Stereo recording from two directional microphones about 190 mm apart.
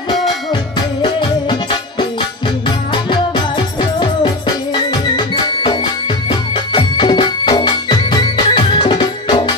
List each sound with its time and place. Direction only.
1.0 s music: 25° left (ahead or behind)